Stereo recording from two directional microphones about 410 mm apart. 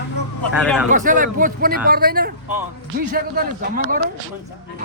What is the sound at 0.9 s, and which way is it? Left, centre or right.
A man's voice, centre.